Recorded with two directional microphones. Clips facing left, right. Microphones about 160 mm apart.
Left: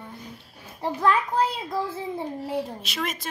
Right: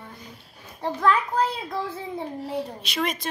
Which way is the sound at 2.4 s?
5° left (ahead or behind).